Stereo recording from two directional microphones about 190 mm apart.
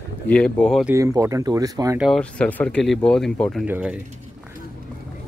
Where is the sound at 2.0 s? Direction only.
Centre (ahead or behind).